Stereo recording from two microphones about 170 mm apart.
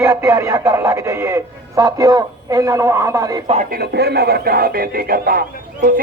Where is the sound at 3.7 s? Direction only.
70° right (ahead or behind).